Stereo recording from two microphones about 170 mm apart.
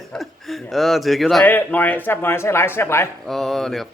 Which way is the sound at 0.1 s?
Centre (ahead or behind).